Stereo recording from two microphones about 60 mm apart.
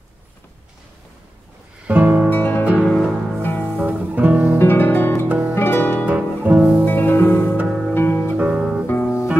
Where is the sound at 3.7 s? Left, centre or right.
Right.